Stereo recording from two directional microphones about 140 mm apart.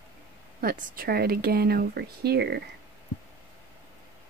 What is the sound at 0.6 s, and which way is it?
Speech, 90° right.